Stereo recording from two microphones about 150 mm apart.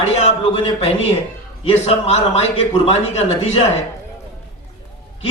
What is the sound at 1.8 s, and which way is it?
Speech, 45° left (ahead or behind).